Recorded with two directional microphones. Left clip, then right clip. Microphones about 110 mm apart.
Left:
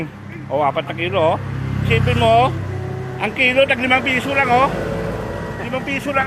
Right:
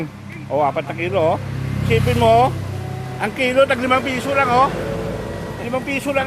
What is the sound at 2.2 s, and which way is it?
Speech, 55° right (ahead or behind).